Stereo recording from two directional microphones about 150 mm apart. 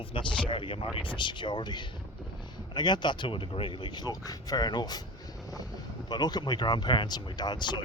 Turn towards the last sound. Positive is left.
turn(degrees=30)  # may be behind; listen again after turning